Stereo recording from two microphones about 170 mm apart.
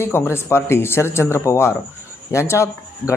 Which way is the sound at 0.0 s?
15° left (ahead or behind).